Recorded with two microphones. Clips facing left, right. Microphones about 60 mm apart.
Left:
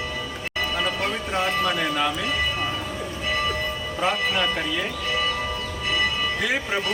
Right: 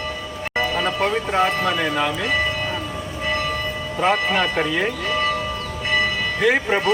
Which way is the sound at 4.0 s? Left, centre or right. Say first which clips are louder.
Right 4 dB; right.